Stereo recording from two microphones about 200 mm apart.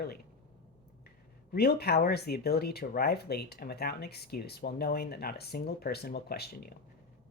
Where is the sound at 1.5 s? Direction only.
50° left (ahead or behind).